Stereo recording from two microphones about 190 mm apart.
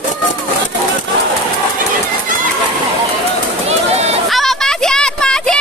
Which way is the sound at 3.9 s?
35° right (ahead or behind).